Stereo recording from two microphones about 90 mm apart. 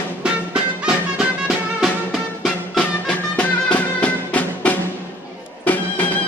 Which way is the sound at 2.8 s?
10° left (ahead or behind).